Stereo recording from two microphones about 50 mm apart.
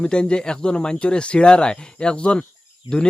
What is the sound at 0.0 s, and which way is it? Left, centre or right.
Speech, centre.